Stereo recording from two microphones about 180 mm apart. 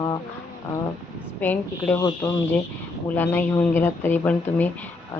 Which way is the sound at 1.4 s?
10° left (ahead or behind).